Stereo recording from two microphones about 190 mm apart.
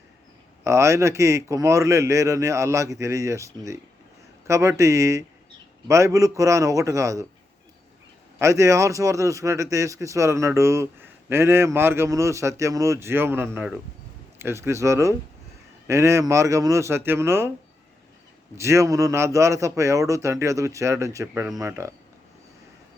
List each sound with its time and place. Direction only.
0.6 s a man's voice: 15° right (ahead or behind)
8.4 s speech: 15° right (ahead or behind)
18.5 s speech: 15° right (ahead or behind)